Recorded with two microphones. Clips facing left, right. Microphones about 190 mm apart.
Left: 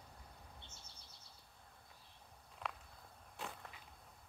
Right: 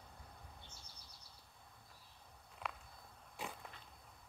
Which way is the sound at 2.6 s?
5° right (ahead or behind).